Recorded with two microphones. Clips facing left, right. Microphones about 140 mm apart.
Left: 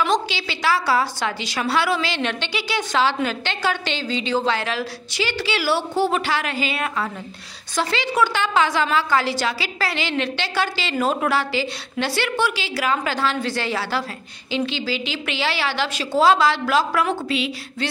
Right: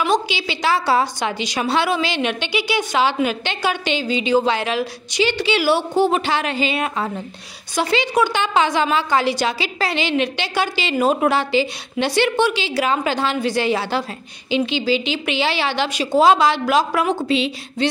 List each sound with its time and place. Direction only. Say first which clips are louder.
0.0 s a woman's voice: right 2 dB; 15° right (ahead or behind)